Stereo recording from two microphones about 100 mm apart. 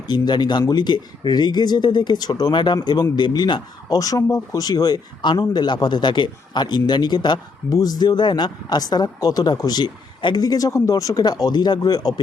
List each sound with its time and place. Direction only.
0.1 s speech: 45° left (ahead or behind)